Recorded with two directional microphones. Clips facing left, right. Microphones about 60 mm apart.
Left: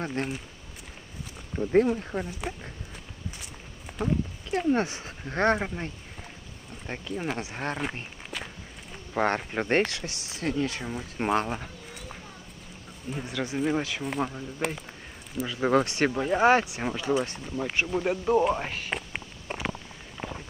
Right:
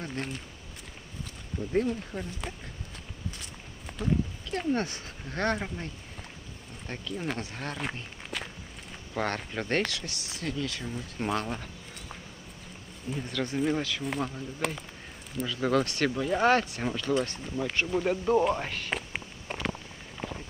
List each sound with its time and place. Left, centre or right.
0.1 s speech: centre
1.5 s speech: left
2.1 s speech: left
3.3 s walk: centre
4.5 s speech: left
8.3 s walk: centre
9.1 s speech: left
11.3 s speech: centre
13.1 s speech: centre
13.7 s speech: left
14.0 s speech: centre
15.4 s speech: left; by 19.7 s centre